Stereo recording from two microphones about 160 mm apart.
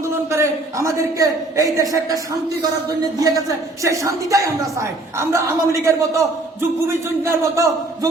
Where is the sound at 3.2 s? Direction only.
20° right (ahead or behind).